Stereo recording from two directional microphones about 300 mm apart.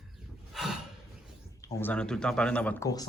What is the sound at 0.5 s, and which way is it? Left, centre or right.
Snort, centre.